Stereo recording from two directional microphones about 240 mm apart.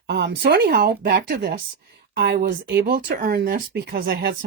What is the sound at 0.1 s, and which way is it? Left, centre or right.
Speech, right.